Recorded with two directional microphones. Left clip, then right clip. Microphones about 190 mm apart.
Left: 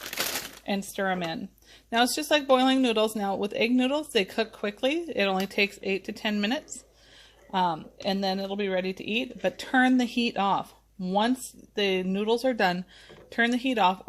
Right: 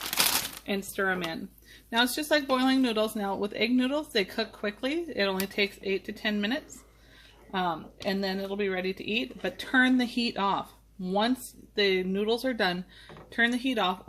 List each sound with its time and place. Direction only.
0.6 s a woman's voice: 35° left (ahead or behind)